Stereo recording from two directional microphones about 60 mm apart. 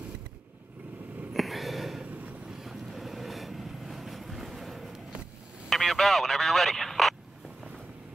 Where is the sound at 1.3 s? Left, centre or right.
Centre.